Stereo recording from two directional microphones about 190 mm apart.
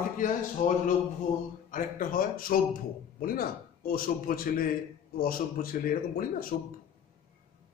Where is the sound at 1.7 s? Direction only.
45° left (ahead or behind).